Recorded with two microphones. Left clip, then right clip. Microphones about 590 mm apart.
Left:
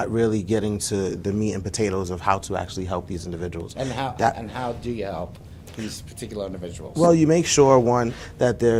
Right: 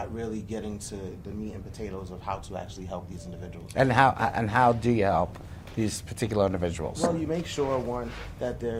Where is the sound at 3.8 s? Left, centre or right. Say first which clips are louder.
Right 2 dB; right.